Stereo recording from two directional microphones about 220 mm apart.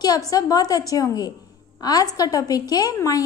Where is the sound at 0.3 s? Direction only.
15° left (ahead or behind).